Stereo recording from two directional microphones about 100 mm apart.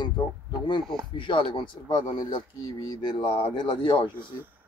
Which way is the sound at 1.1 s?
55° left (ahead or behind).